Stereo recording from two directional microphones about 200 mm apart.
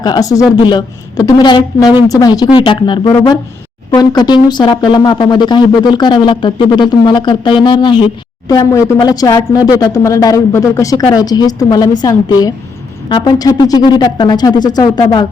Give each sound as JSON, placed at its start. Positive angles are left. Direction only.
{"t": 0.0, "sound": "speech", "side_deg": 20}